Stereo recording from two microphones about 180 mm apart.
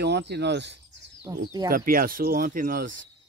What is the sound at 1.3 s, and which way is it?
Speech, 20° right (ahead or behind).